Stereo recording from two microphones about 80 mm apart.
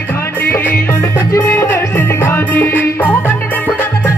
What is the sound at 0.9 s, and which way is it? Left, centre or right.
Music, left.